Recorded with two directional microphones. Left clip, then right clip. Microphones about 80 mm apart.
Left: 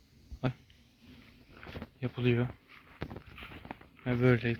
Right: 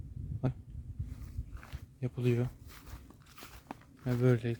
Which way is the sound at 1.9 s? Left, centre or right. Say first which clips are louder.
Left 2 dB; centre.